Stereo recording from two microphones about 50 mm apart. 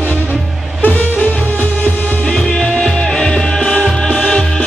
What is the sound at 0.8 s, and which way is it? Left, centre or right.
Music, left.